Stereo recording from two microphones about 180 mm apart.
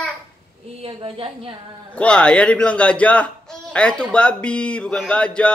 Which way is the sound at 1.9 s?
5° left (ahead or behind).